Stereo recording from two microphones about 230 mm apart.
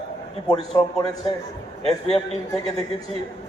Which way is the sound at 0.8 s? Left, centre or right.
Centre.